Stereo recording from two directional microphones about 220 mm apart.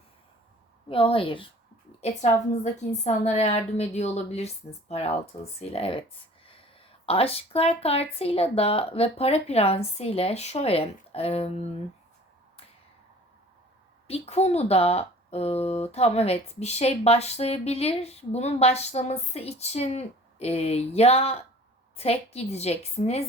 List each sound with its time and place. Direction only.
0.9 s a woman's voice: 25° left (ahead or behind)
14.1 s speech: 30° left (ahead or behind)